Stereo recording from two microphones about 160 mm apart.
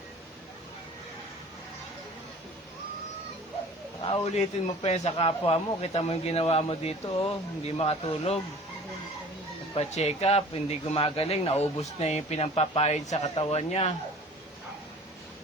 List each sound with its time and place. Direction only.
4.0 s speech: 35° left (ahead or behind)
9.7 s speech: 40° left (ahead or behind)